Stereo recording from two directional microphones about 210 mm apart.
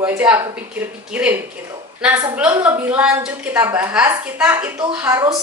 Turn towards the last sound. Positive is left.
turn(degrees=-10)  # may be behind; listen again after turning